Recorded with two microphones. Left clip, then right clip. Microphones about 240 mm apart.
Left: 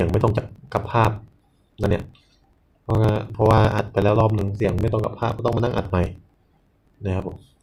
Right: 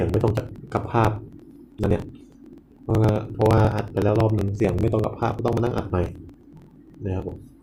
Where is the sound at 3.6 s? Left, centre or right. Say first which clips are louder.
Left 3 dB; centre.